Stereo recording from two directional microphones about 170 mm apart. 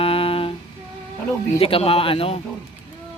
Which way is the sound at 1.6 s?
35° left (ahead or behind).